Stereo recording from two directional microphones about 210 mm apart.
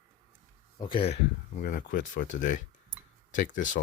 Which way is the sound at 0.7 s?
25° left (ahead or behind).